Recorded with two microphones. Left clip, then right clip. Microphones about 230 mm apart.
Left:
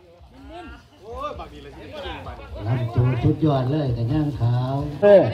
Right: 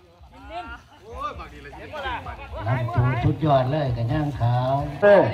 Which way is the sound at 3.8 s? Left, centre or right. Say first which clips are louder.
Left 1 dB; right.